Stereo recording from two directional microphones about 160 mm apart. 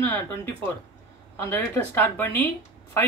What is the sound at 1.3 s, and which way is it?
Speech, 15° left (ahead or behind).